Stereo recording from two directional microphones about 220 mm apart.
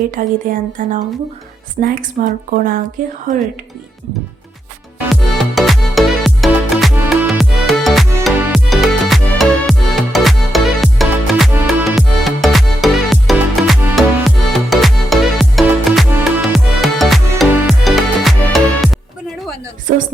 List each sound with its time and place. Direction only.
0.2 s speech: 35° right (ahead or behind)
5.5 s music: centre (ahead or behind)
19.9 s music: 40° right (ahead or behind)